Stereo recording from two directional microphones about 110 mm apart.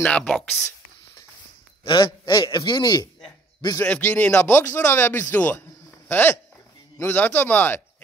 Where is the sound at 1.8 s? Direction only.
50° left (ahead or behind).